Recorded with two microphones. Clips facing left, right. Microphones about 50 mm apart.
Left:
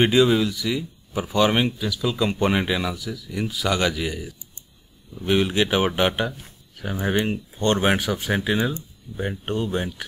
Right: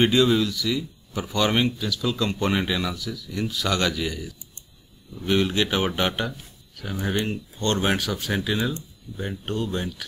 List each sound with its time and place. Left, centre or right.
0.0 s speech: centre